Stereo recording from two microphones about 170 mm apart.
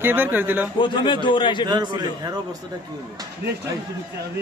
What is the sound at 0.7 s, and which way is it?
Speech, 30° left (ahead or behind).